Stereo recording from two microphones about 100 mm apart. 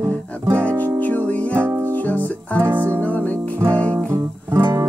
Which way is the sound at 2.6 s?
20° right (ahead or behind).